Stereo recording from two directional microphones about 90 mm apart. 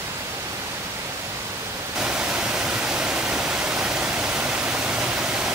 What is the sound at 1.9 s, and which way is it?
Pink noise, 10° right (ahead or behind).